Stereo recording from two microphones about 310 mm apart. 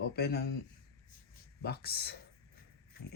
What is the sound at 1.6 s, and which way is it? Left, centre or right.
Speech, left.